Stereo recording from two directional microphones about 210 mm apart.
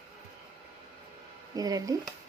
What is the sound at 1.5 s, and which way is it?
Speech, 15° right (ahead or behind).